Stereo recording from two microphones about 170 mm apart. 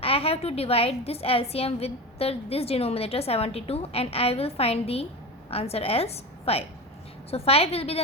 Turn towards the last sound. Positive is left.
turn(degrees=35)  # may be behind; listen again after turning